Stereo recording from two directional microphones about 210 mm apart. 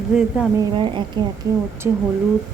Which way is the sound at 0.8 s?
25° right (ahead or behind).